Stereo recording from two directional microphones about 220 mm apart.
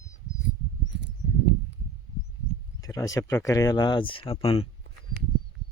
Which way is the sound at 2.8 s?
15° left (ahead or behind).